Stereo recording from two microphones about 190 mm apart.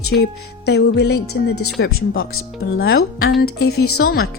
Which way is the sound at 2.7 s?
55° left (ahead or behind).